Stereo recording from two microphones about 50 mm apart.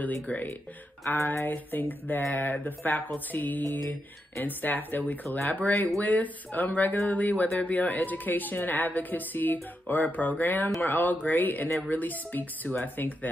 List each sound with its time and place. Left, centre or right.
0.0 s a woman's voice: left
1.1 s a sound: left
1.5 s a woman's voice: left